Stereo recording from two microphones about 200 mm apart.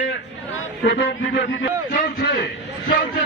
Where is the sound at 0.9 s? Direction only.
55° left (ahead or behind).